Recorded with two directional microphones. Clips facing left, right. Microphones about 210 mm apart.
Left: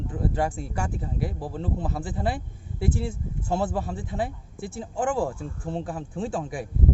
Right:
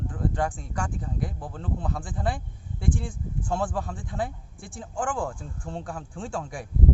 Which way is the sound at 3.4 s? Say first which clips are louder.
Left 2 dB; 25° left (ahead or behind).